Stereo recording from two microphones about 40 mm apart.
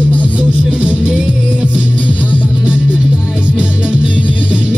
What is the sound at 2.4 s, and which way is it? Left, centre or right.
Music, right.